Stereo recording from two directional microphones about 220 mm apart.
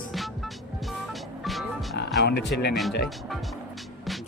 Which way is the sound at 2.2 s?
50° left (ahead or behind).